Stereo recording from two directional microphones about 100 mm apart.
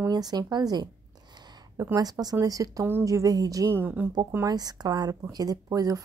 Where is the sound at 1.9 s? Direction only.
40° right (ahead or behind).